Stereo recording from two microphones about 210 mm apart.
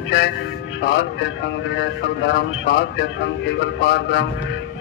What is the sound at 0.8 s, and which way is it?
A man's voice, 60° left (ahead or behind).